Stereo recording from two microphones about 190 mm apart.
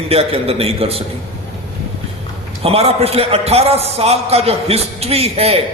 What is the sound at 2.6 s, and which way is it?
A man's voice, 30° right (ahead or behind).